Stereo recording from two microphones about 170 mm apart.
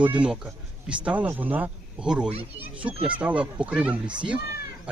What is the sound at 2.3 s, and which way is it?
Speech, 35° right (ahead or behind).